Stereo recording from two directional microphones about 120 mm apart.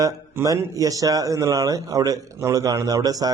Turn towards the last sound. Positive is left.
turn(degrees=-30)  # may be behind; listen again after turning